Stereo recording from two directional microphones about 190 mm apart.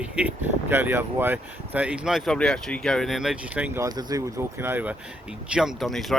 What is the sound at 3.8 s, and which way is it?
Speech, 20° right (ahead or behind).